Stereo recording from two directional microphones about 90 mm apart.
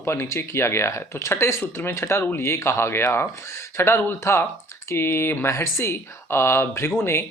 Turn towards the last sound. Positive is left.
turn(degrees=30)  # may be behind; listen again after turning